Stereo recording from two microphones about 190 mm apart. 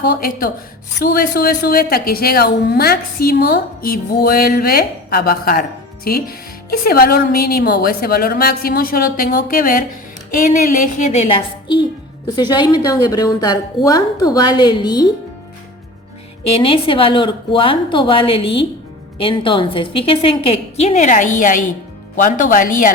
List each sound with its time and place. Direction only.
0.2 s a woman's voice: 50° left (ahead or behind); by 15.1 s 20° left (ahead or behind)
16.6 s a woman's voice: 30° left (ahead or behind); by 22.9 s 45° left (ahead or behind)